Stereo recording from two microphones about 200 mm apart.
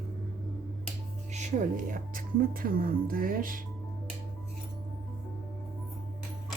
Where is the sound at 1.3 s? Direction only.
35° right (ahead or behind).